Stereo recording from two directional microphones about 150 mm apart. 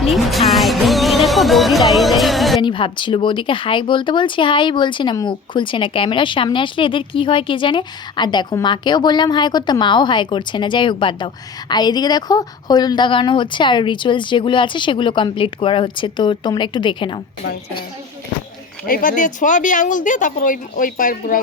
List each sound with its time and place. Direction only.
0.0 s music: centre (ahead or behind)
2.6 s a woman's voice: 35° left (ahead or behind)
18.9 s speech: 65° left (ahead or behind)